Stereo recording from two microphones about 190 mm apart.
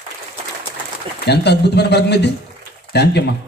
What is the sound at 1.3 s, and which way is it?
A man's voice, 60° left (ahead or behind).